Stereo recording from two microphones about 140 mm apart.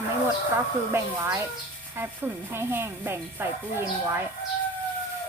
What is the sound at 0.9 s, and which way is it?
Speech, 20° right (ahead or behind).